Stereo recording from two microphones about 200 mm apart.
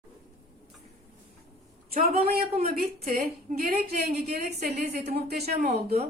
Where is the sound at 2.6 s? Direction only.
50° right (ahead or behind).